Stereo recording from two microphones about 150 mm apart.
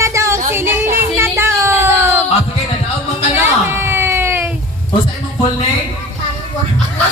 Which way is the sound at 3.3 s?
15° right (ahead or behind).